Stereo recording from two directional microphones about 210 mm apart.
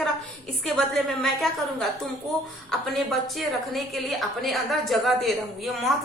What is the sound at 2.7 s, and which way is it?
A woman's voice, centre (ahead or behind).